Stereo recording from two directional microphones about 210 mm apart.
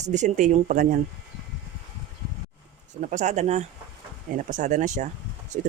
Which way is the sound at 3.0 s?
35° right (ahead or behind).